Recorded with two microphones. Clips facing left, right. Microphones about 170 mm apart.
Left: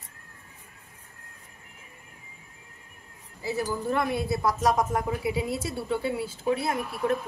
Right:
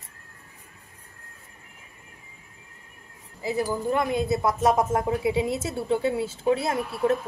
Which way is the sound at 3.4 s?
15° right (ahead or behind).